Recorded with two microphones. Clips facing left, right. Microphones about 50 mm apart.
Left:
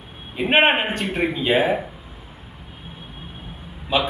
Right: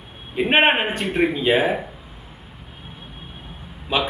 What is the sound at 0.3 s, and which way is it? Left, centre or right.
A man's voice, centre.